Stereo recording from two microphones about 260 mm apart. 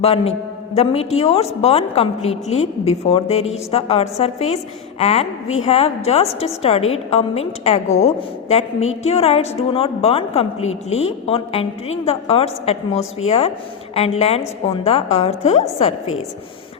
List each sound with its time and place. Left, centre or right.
0.0 s a woman's voice: left